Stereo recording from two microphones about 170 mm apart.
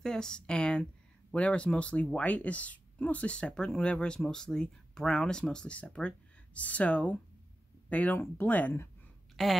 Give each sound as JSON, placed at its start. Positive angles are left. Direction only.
{"t": 0.0, "sound": "speech", "side_deg": 5}